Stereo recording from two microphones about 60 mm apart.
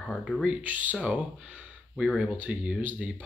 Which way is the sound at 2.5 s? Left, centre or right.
Centre.